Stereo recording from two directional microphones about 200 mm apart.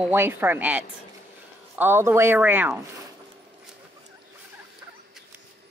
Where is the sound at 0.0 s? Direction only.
10° right (ahead or behind).